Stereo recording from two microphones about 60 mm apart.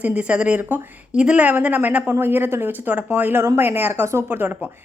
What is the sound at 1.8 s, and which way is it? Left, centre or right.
Speech, right.